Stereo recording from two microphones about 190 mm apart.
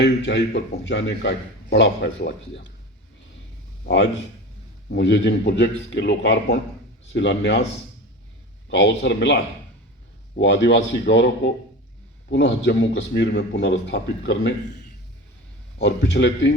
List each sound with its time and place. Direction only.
0.0 s a man's voice: 70° left (ahead or behind)
3.8 s a man's voice: 70° left (ahead or behind)
8.7 s a man's voice: 65° left (ahead or behind)
15.8 s a man's voice: 65° left (ahead or behind)